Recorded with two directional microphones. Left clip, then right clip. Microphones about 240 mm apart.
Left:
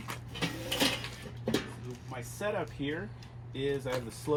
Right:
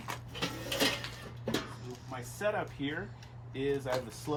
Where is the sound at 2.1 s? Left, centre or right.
Centre.